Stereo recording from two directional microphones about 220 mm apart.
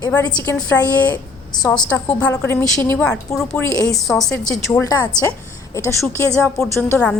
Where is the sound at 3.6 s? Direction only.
15° left (ahead or behind).